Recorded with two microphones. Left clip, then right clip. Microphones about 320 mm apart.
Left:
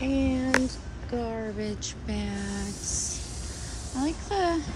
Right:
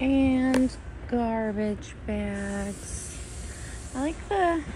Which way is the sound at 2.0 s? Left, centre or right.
Centre.